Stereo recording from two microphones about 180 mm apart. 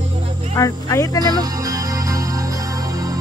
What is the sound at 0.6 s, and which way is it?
Speech, 20° left (ahead or behind).